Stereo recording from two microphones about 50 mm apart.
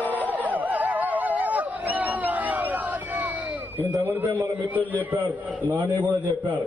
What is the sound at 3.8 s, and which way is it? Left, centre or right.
A man's voice, right.